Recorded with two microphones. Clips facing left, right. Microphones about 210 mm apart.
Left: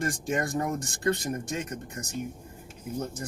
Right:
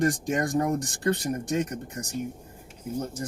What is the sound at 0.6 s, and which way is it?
Speech, 15° right (ahead or behind).